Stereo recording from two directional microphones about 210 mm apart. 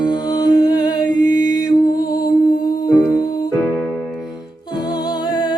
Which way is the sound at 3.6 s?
5° left (ahead or behind).